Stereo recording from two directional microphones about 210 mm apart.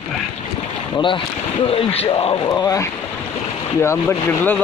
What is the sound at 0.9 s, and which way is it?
Speech, 25° left (ahead or behind).